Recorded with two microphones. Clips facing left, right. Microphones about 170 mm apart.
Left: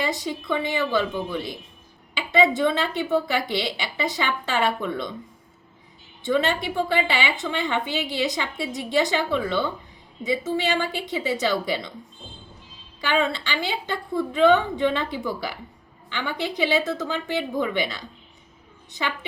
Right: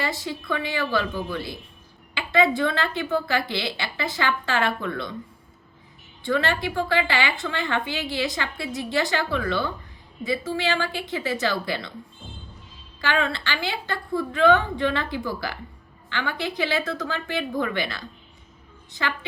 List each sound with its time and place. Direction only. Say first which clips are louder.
0.0 s a woman's voice: left 2 dB; 20° left (ahead or behind)
6.2 s a woman's voice: left 1 dB; 20° left (ahead or behind)
13.0 s a woman's voice: left 2 dB; 20° left (ahead or behind)